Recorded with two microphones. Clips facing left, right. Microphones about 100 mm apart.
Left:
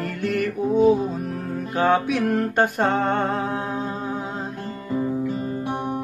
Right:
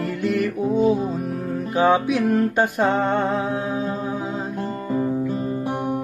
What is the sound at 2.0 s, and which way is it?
Music, 55° left (ahead or behind).